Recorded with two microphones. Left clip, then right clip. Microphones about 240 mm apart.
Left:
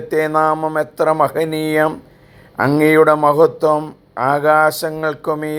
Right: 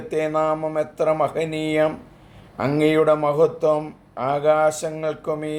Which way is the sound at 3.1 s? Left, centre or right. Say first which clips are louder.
Left 6 dB; centre.